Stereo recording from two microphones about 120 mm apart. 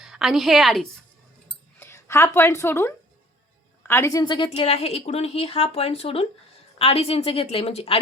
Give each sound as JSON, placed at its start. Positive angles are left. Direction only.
{"t": 0.0, "sound": "a woman's voice", "side_deg": 0}
{"t": 1.8, "sound": "a woman's voice", "side_deg": 20}
{"t": 4.2, "sound": "a woman's voice", "side_deg": 40}
{"t": 4.5, "sound": "speech", "side_deg": 55}